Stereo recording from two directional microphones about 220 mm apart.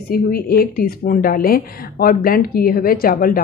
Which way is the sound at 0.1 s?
40° left (ahead or behind).